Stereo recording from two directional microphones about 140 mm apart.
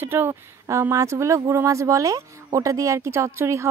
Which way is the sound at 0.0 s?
15° right (ahead or behind).